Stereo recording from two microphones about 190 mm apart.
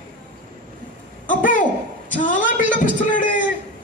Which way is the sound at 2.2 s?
45° left (ahead or behind).